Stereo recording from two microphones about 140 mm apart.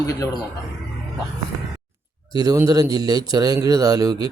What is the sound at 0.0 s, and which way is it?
Speech, 25° left (ahead or behind).